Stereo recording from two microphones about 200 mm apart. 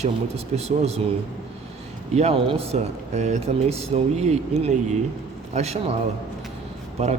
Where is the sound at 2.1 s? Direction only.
30° right (ahead or behind).